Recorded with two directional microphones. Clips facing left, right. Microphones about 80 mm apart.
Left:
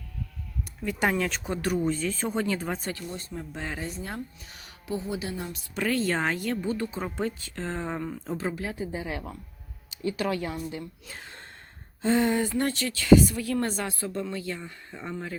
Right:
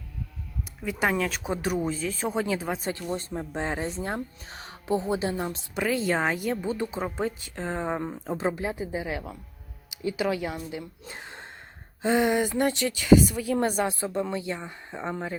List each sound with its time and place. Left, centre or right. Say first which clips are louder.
0.8 s speech: even; centre
1.9 s speech: left 1 dB; centre
2.9 s speech: right 5 dB; right
5.7 s a woman's voice: right 1 dB; centre
11.0 s gasp: right 3 dB; right
12.0 s a woman's voice: right 1 dB; centre